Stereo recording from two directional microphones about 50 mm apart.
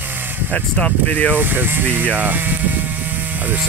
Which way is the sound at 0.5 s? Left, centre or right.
Left.